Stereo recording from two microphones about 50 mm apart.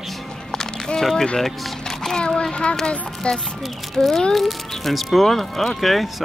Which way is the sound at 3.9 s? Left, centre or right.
Centre.